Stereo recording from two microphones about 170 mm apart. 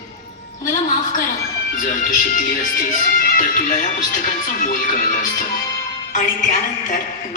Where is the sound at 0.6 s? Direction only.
50° left (ahead or behind).